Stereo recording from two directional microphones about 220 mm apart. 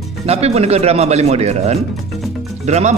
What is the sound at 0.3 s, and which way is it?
Speech, 30° right (ahead or behind).